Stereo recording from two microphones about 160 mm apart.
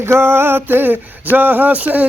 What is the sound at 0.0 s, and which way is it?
Speech, 15° right (ahead or behind).